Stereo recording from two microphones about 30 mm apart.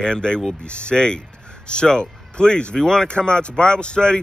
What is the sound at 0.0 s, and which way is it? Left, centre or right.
A man's voice, left.